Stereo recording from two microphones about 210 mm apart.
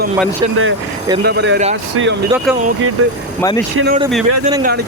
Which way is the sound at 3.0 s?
90° right.